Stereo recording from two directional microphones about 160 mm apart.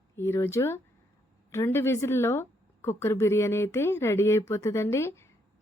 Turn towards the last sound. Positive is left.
turn(degrees=15)  # may be behind; listen again after turning